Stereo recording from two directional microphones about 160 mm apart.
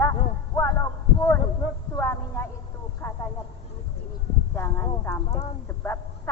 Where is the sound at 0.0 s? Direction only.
15° left (ahead or behind).